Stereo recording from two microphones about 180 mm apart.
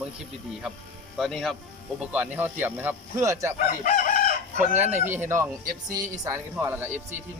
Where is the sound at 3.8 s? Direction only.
45° left (ahead or behind).